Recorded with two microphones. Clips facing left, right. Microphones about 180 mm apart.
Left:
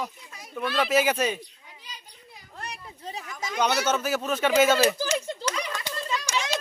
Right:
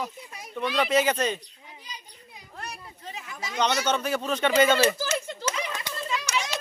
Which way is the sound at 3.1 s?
35° left (ahead or behind).